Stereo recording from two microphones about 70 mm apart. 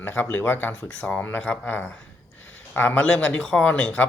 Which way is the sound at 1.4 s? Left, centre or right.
Centre.